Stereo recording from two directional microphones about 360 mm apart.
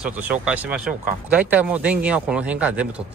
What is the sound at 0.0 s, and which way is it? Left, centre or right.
Speech, centre.